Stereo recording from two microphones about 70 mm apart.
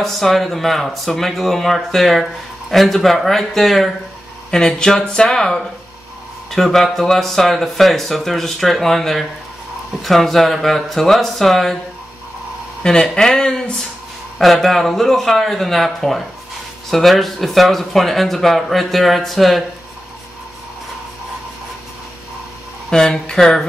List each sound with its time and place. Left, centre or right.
0.0 s speech: centre
12.8 s speech: centre
22.8 s speech: centre